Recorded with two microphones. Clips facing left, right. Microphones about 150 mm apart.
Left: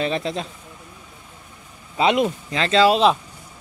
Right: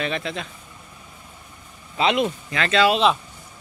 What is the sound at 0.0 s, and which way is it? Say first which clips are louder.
Speech: left 3 dB; 35° left (ahead or behind).